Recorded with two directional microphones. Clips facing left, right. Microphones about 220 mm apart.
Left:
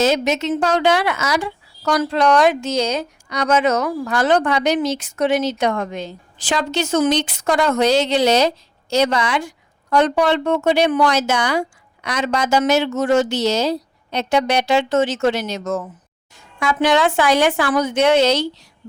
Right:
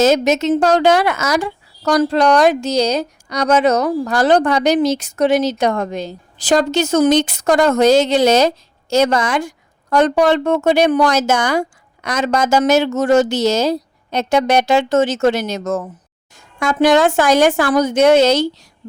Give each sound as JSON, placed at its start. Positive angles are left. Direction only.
{"t": 0.0, "sound": "a woman's voice", "side_deg": -45}